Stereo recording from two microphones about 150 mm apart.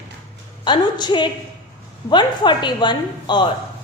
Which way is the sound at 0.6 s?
30° left (ahead or behind).